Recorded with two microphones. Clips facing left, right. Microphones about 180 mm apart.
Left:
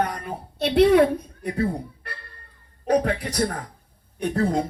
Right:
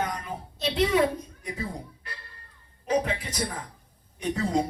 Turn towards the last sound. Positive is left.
turn(degrees=55)  # may be behind; listen again after turning